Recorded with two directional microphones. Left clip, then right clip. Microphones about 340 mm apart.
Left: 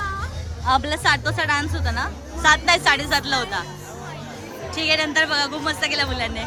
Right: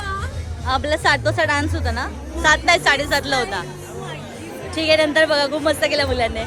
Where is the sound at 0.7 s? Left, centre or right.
Centre.